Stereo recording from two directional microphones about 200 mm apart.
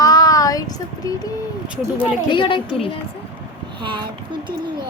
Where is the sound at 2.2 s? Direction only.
25° left (ahead or behind).